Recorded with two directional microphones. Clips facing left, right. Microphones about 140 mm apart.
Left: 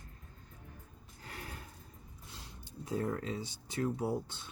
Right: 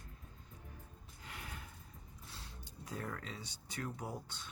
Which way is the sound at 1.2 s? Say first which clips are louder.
Left 4 dB; 40° left (ahead or behind).